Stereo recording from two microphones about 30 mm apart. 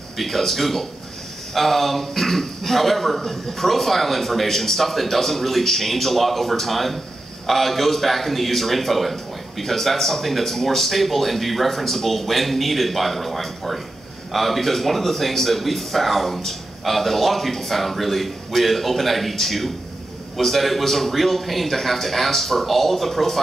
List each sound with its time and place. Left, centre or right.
0.2 s speech: centre